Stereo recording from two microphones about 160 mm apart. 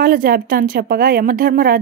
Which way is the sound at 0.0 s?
65° right (ahead or behind).